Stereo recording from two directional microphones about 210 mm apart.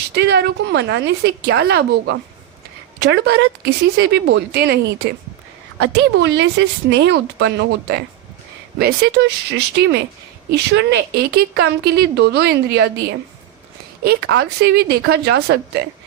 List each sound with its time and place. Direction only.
0.1 s a woman's voice: 55° right (ahead or behind)